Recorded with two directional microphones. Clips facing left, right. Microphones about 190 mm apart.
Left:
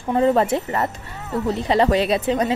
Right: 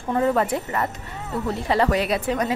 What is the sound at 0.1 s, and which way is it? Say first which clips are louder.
A woman's voice: left 3 dB; 25° left (ahead or behind).